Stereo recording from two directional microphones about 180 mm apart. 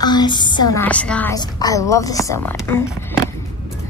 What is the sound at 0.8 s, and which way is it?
Speech, 5° left (ahead or behind).